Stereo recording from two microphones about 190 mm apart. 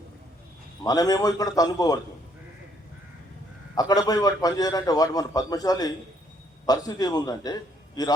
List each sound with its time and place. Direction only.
0.9 s a man's voice: 20° left (ahead or behind)
3.8 s a man's voice: 20° left (ahead or behind)